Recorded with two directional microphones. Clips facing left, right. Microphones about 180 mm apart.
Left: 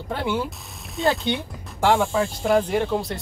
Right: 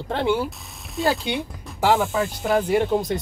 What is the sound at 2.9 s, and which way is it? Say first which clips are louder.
Speech: right 3 dB; 20° right (ahead or behind).